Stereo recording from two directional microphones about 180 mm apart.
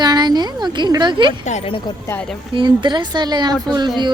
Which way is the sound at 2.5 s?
25° right (ahead or behind).